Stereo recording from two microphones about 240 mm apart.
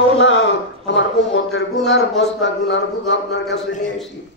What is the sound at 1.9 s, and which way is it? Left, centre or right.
Speech, left.